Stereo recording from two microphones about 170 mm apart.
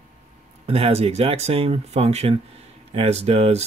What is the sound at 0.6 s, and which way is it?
Speech, 35° right (ahead or behind).